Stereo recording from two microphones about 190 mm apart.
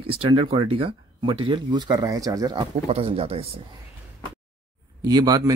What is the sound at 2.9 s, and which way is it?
Speech, 30° right (ahead or behind).